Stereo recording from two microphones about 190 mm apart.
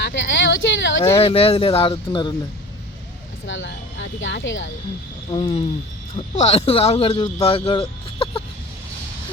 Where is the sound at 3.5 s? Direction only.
75° left (ahead or behind).